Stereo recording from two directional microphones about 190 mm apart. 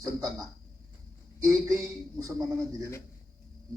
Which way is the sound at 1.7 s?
15° right (ahead or behind).